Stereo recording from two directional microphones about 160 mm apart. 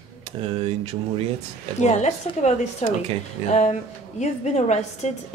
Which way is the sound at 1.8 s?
45° left (ahead or behind).